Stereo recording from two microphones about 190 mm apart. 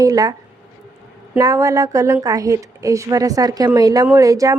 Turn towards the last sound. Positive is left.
turn(degrees=-20)  # may be behind; listen again after turning